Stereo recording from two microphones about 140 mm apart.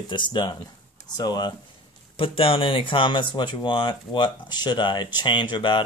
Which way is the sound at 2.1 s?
40° left (ahead or behind).